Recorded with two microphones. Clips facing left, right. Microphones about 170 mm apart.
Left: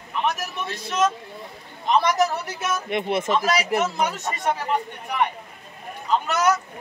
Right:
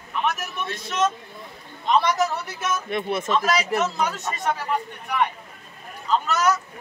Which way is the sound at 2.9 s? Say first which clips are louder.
Left 2 dB; 20° left (ahead or behind).